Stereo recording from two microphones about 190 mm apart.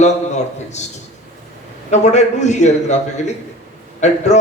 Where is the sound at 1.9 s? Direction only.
35° left (ahead or behind).